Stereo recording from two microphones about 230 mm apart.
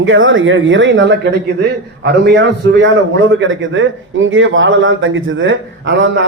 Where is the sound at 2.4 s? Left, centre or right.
Right.